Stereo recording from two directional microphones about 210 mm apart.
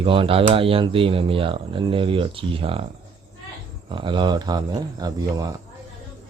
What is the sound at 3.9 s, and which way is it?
Speech, 25° right (ahead or behind).